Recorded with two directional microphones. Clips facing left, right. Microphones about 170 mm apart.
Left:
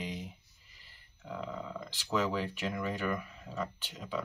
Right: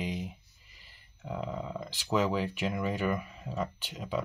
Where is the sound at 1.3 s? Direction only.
20° right (ahead or behind).